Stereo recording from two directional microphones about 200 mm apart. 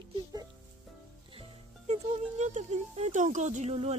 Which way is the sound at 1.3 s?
30° right (ahead or behind).